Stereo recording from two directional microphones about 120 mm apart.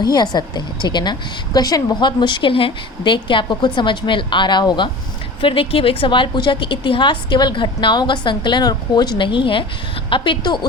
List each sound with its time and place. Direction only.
0.0 s a woman's voice: 35° left (ahead or behind)